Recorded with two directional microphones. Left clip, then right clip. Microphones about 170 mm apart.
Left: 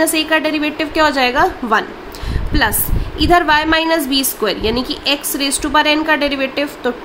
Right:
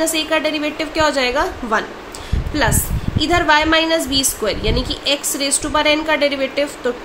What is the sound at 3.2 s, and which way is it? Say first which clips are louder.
A woman's voice: left 2 dB; 35° left (ahead or behind).